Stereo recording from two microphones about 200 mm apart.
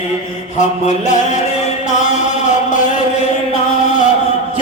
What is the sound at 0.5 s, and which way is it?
Music, 35° left (ahead or behind).